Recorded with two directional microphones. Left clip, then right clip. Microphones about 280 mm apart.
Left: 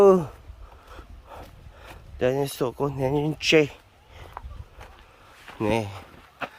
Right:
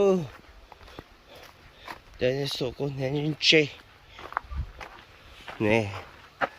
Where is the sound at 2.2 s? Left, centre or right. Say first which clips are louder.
Left 3 dB; centre.